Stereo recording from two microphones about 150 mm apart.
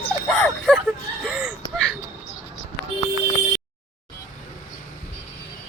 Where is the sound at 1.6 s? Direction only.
25° right (ahead or behind).